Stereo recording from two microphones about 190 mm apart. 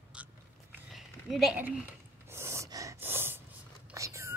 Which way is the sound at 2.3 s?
15° right (ahead or behind).